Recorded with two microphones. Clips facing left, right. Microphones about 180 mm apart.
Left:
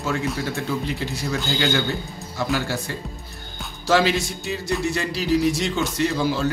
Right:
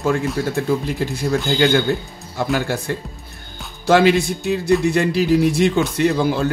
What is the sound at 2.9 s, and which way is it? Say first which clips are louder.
A man's voice: right 6 dB; 55° right (ahead or behind).